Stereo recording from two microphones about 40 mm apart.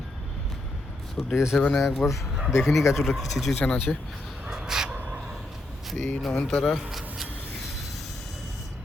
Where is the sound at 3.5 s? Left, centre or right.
Left.